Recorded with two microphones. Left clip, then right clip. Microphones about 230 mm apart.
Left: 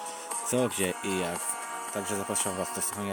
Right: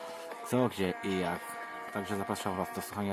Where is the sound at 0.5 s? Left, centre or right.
Centre.